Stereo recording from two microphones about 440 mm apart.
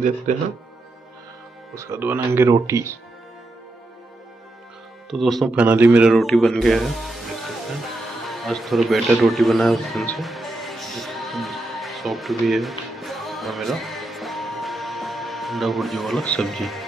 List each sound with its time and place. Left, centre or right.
0.3 s speech: centre
1.8 s speech: centre
5.1 s a man's voice: centre